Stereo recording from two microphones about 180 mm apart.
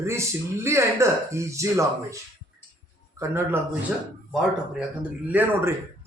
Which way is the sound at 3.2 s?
15° right (ahead or behind).